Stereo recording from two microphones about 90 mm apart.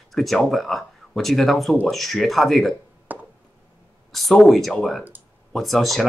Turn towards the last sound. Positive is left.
turn(degrees=0)  # may be behind; listen again after turning